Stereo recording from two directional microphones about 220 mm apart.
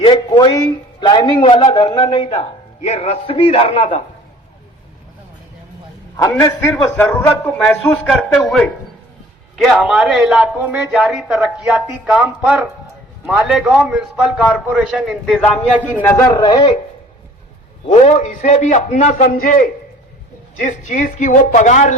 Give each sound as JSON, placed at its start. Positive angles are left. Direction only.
{"t": 0.0, "sound": "a man's voice", "side_deg": 20}
{"t": 6.2, "sound": "a man's voice", "side_deg": 15}
{"t": 16.0, "sound": "a man's voice", "side_deg": 10}
{"t": 17.8, "sound": "a woman's voice", "side_deg": 30}